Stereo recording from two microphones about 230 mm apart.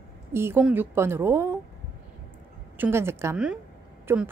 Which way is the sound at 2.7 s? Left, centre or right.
Centre.